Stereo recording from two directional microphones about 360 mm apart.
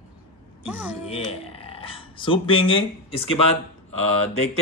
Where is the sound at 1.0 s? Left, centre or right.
Centre.